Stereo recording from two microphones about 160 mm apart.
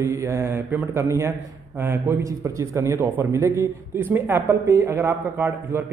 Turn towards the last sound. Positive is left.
turn(degrees=-20)  # may be behind; listen again after turning